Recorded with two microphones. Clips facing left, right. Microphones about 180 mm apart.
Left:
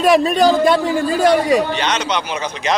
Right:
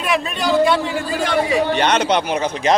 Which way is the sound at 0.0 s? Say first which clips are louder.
Left 8 dB; 35° left (ahead or behind).